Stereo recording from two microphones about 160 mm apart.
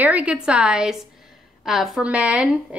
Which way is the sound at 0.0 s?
10° right (ahead or behind).